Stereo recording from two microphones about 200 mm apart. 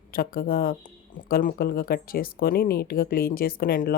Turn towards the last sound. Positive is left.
turn(degrees=45)  # may be behind; listen again after turning